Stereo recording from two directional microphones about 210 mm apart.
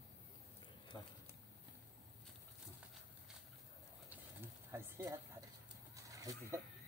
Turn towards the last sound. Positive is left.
turn(degrees=-15)  # may be behind; listen again after turning